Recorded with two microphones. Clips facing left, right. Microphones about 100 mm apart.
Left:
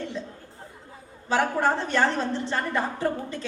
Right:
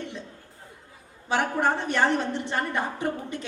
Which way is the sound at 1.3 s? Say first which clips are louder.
Left 1 dB; 15° right (ahead or behind).